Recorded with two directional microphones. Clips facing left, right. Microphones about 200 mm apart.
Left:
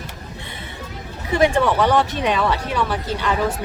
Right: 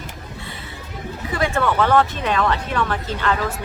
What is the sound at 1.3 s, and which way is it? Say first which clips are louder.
Speech: left 4 dB; 20° left (ahead or behind).